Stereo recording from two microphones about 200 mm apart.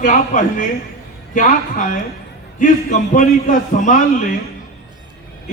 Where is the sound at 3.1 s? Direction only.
40° left (ahead or behind).